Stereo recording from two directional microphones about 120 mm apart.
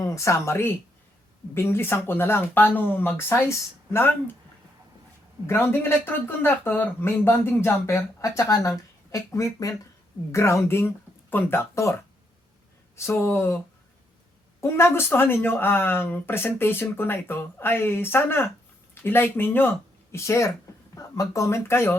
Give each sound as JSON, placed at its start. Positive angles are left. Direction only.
{"t": 0.0, "sound": "speech", "side_deg": 25}
{"t": 5.5, "sound": "speech", "side_deg": 20}
{"t": 13.0, "sound": "speech", "side_deg": 20}
{"t": 14.6, "sound": "speech", "side_deg": 20}